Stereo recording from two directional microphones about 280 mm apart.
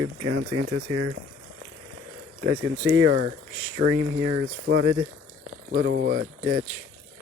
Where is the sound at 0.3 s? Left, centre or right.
Right.